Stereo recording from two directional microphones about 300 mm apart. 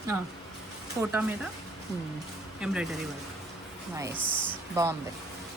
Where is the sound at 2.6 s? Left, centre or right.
Centre.